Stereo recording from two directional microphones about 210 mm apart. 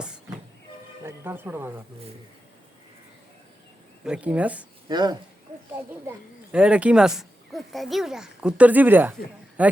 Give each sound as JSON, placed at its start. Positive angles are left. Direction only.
{"t": 1.0, "sound": "speech", "side_deg": -10}
{"t": 4.0, "sound": "speech", "side_deg": -5}
{"t": 4.9, "sound": "speech", "side_deg": -20}
{"t": 6.1, "sound": "a man's voice", "side_deg": -5}